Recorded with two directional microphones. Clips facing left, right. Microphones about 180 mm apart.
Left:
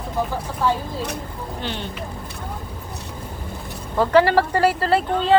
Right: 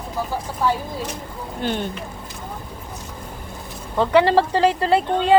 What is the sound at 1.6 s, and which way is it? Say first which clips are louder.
Speech: right 6 dB; 50° right (ahead or behind).